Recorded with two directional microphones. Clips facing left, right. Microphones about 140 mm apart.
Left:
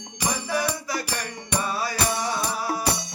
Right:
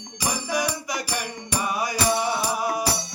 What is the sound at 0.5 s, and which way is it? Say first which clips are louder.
Music: even; 15° right (ahead or behind).